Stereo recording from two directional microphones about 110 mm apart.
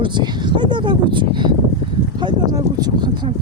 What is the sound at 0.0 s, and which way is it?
Speech, 45° right (ahead or behind).